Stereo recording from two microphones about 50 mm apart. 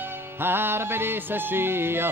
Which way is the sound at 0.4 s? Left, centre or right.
Right.